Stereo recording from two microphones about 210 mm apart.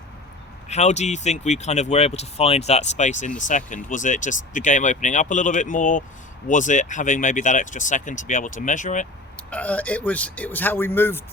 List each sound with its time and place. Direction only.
0.7 s speech: 35° left (ahead or behind)
9.5 s a man's voice: 5° left (ahead or behind)